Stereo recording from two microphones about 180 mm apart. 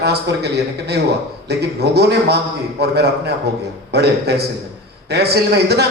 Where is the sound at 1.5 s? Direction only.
65° right (ahead or behind).